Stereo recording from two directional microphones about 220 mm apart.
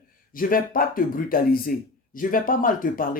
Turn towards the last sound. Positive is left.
turn(degrees=40)  # may be behind; listen again after turning